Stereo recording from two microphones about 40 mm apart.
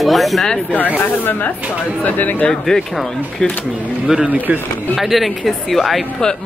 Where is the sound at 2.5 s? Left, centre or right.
Centre.